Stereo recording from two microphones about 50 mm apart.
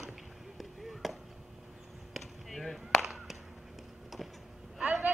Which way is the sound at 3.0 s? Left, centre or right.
Centre.